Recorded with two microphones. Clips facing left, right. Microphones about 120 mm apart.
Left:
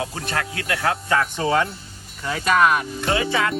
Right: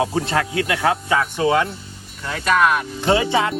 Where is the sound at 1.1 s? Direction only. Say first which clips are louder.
Even; 5° right (ahead or behind).